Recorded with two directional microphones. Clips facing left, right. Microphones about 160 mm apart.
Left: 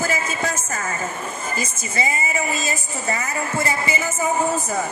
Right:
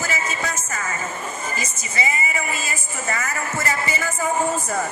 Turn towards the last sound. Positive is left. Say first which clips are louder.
# left 1 dB
turn(degrees=15)  # may be behind; listen again after turning